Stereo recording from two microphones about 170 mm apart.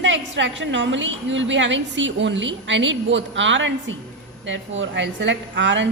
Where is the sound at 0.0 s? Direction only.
90° right.